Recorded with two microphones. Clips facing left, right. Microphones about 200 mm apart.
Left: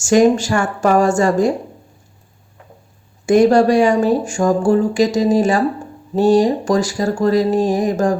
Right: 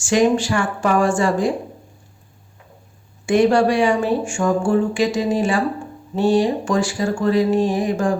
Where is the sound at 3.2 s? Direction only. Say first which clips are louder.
Left 4 dB; 40° left (ahead or behind).